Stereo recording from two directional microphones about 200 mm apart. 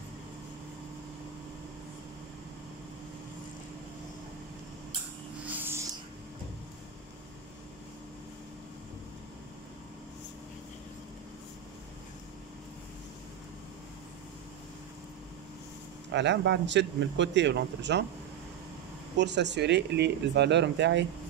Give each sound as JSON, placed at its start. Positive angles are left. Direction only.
{"t": 5.4, "sound": "a sound", "side_deg": -10}
{"t": 16.1, "sound": "speech", "side_deg": -60}
{"t": 19.1, "sound": "speech", "side_deg": -60}